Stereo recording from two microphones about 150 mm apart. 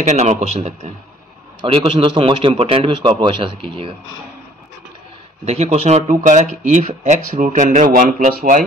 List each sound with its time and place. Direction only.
0.0 s speech: 50° right (ahead or behind)
1.6 s a man's voice: 35° right (ahead or behind)
5.4 s speech: 45° right (ahead or behind); by 8.6 s 60° right (ahead or behind)